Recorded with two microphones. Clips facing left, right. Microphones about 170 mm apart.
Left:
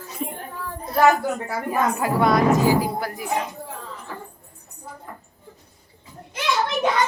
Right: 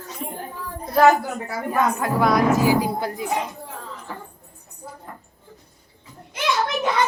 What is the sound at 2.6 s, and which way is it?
Speech, 15° right (ahead or behind).